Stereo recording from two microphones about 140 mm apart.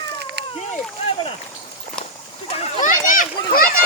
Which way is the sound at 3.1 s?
75° left (ahead or behind).